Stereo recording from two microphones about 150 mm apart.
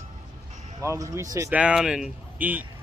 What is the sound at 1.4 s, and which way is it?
Speech, 5° right (ahead or behind).